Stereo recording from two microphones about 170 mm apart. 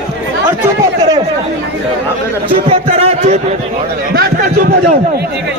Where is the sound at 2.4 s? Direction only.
30° right (ahead or behind).